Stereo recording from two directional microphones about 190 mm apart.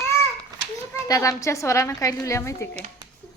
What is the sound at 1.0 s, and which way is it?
A woman's voice, 15° left (ahead or behind).